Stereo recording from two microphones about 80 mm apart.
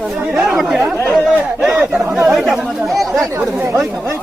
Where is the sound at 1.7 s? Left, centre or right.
Centre.